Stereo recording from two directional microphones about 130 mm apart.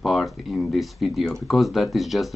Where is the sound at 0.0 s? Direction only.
Centre (ahead or behind).